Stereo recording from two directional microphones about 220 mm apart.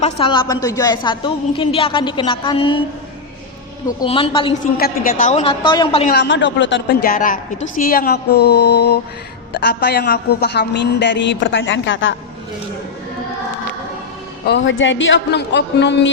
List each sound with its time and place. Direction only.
0.0 s a woman's voice: 20° left (ahead or behind)
4.0 s a woman's voice: 25° left (ahead or behind)
4.8 s a woman's voice: 40° left (ahead or behind); by 6.1 s 25° left (ahead or behind)
6.1 s a woman's voice: 50° left (ahead or behind)
14.4 s a woman's voice: 55° left (ahead or behind)